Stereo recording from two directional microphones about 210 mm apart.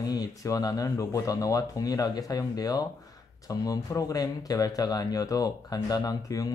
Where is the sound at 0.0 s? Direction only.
20° left (ahead or behind).